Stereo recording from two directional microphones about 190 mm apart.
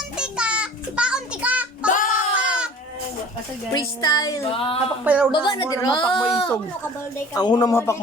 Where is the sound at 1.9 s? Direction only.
45° left (ahead or behind).